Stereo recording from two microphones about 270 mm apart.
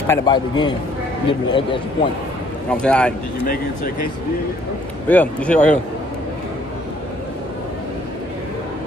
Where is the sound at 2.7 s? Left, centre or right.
Centre.